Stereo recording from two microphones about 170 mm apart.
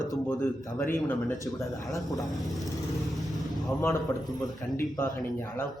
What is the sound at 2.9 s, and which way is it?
Vehicle, centre (ahead or behind).